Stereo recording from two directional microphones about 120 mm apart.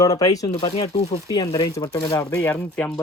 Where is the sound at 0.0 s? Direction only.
30° left (ahead or behind).